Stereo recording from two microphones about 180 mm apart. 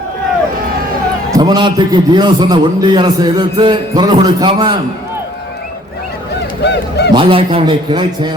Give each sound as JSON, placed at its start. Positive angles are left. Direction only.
{"t": 1.3, "sound": "a man's voice", "side_deg": -25}
{"t": 6.6, "sound": "honk", "side_deg": 70}
{"t": 7.1, "sound": "a man's voice", "side_deg": -30}